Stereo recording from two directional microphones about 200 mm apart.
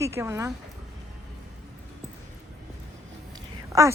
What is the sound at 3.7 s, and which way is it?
Speech, 15° right (ahead or behind).